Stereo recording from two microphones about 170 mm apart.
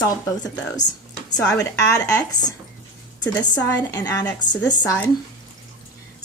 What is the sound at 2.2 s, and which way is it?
Speech, 25° left (ahead or behind).